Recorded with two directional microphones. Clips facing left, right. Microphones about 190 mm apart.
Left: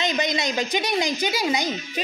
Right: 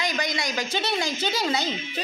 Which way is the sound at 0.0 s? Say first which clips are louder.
Left 4 dB; 20° left (ahead or behind).